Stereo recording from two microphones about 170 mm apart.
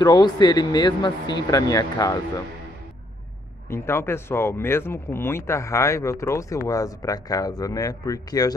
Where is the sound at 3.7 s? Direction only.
15° left (ahead or behind).